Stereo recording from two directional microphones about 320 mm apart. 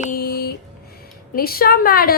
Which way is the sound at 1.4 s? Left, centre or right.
Left.